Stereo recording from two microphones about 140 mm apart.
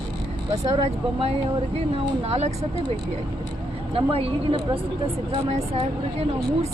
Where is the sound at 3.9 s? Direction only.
40° right (ahead or behind).